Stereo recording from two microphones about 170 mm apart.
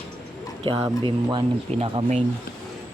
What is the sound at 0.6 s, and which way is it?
Speech, 30° right (ahead or behind).